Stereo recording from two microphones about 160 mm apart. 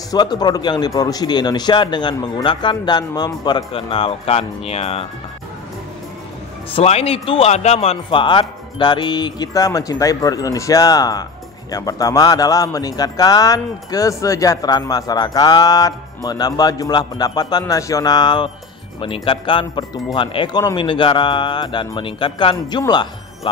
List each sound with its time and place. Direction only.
0.1 s a man's voice: 25° left (ahead or behind)
6.7 s a man's voice: 40° left (ahead or behind)